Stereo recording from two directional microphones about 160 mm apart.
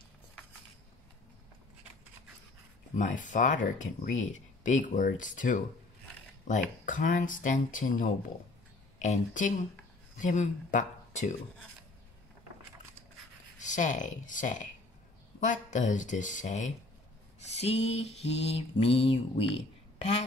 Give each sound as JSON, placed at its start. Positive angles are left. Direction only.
{"t": 3.0, "sound": "speech", "side_deg": 50}
{"t": 13.6, "sound": "speech", "side_deg": 50}
{"t": 17.4, "sound": "mantra", "side_deg": 40}
{"t": 20.0, "sound": "speech", "side_deg": 45}